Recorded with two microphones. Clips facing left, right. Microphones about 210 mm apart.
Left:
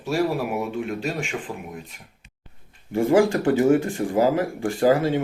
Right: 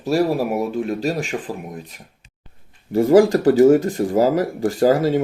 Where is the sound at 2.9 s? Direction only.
40° right (ahead or behind).